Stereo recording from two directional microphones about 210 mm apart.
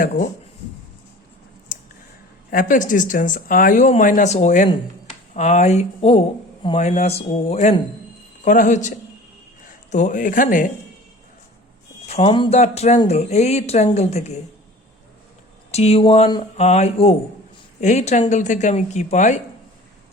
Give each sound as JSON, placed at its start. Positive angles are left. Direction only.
{"t": 2.5, "sound": "speech", "side_deg": 40}
{"t": 12.0, "sound": "speech", "side_deg": 30}
{"t": 15.7, "sound": "speech", "side_deg": 30}